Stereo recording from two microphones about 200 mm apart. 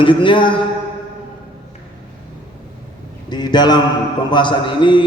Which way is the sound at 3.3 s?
20° left (ahead or behind).